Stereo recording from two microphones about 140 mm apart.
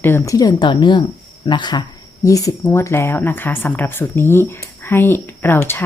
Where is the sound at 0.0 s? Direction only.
15° left (ahead or behind).